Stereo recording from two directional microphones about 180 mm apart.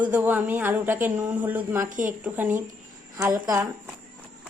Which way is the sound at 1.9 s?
45° right (ahead or behind).